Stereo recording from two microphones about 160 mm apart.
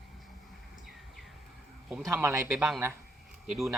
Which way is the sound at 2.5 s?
Centre (ahead or behind).